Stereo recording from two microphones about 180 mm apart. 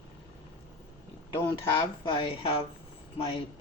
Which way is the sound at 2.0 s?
30° left (ahead or behind).